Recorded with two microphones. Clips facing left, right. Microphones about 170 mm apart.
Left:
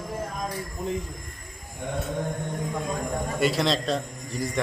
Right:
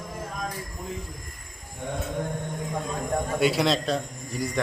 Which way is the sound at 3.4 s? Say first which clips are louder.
Right 1 dB; centre (ahead or behind).